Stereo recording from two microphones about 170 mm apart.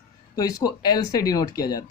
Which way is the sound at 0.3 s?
20° left (ahead or behind).